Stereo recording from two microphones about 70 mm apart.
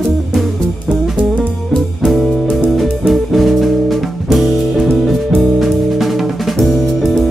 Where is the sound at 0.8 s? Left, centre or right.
Centre.